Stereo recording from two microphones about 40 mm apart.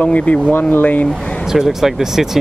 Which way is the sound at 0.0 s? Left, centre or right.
Left.